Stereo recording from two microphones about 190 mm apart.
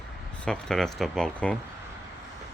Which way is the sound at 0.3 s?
5° left (ahead or behind).